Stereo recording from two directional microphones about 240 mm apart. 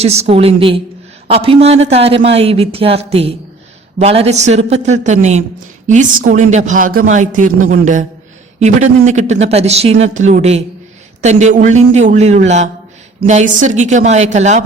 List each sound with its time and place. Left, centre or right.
0.0 s a man's voice: right